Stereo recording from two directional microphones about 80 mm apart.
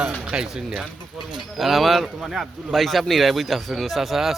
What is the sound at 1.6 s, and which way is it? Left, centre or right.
Speech, centre.